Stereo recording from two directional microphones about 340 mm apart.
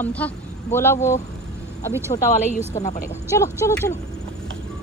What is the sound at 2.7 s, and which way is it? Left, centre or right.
Speech, centre.